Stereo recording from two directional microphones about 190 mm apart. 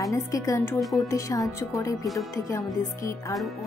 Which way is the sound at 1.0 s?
15° left (ahead or behind).